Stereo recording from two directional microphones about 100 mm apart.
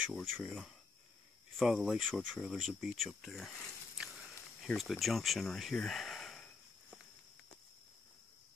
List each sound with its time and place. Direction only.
0.1 s speech: 5° left (ahead or behind)
4.7 s speech: centre (ahead or behind)